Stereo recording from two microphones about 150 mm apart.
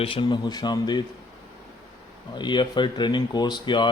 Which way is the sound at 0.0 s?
35° left (ahead or behind).